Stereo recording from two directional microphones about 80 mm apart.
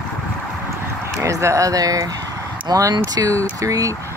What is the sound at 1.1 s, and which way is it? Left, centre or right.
Speech, right.